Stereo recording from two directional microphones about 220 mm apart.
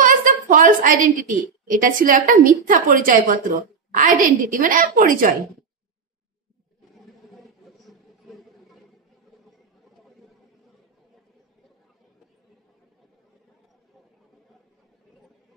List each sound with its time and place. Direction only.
0.0 s a woman's voice: 40° right (ahead or behind)